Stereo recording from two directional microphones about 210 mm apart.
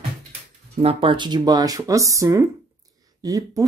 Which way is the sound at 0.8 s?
25° right (ahead or behind).